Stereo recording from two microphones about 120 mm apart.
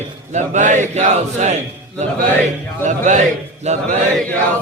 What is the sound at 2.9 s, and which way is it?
Speech, 90° right.